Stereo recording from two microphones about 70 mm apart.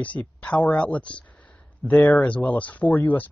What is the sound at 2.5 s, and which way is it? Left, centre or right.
Speech, left.